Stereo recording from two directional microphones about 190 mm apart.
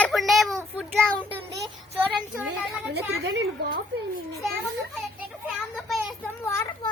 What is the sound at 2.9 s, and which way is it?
A woman's voice, 60° right (ahead or behind).